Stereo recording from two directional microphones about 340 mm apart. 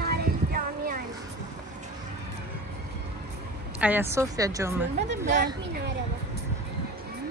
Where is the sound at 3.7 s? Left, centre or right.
Centre.